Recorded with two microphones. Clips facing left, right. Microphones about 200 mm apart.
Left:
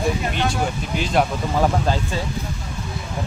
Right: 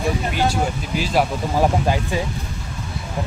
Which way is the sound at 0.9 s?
5° right (ahead or behind).